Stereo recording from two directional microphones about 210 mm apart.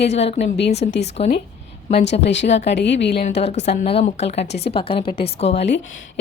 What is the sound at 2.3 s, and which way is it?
Speech, 60° left (ahead or behind).